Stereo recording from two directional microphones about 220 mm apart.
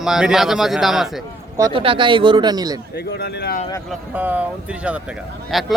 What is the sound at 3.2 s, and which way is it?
Speech, 45° left (ahead or behind).